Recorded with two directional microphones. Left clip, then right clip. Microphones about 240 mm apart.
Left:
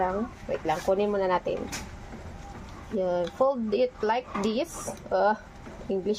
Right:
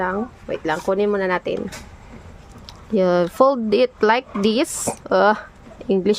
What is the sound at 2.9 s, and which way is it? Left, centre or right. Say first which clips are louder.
Speech: right 10 dB; right.